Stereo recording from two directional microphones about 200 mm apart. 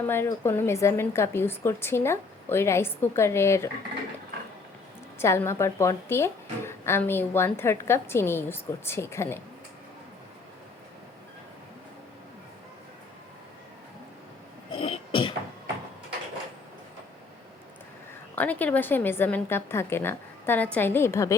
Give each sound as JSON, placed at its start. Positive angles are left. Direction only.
{"t": 0.0, "sound": "a woman's voice", "side_deg": 10}
{"t": 5.2, "sound": "a woman's voice", "side_deg": 15}
{"t": 14.7, "sound": "throat clearing", "side_deg": 25}
{"t": 18.3, "sound": "a woman's voice", "side_deg": 10}